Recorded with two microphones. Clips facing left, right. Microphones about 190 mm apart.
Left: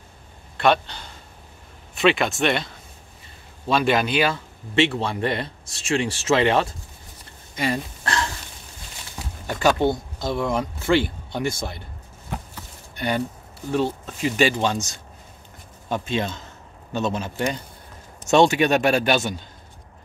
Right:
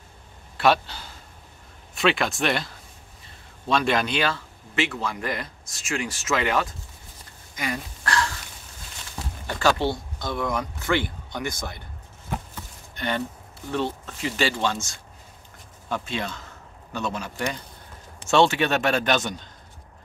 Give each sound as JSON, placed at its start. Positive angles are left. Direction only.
{"t": 0.6, "sound": "a man's voice", "side_deg": -5}
{"t": 4.7, "sound": "speech", "side_deg": 30}
{"t": 7.5, "sound": "a sound", "side_deg": 30}
{"t": 9.6, "sound": "speech", "side_deg": 20}
{"t": 13.7, "sound": "speech", "side_deg": 10}